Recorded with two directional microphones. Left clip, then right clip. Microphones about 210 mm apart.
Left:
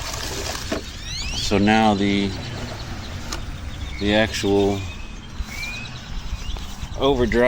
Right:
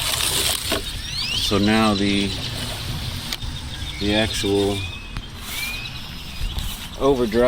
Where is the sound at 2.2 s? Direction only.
Centre (ahead or behind).